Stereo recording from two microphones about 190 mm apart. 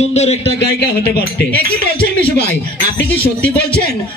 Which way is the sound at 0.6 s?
60° left (ahead or behind).